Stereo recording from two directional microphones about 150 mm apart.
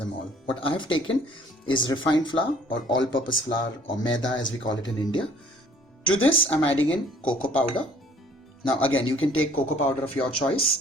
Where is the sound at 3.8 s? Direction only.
30° left (ahead or behind).